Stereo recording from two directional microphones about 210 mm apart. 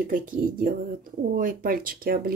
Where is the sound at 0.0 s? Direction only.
40° right (ahead or behind).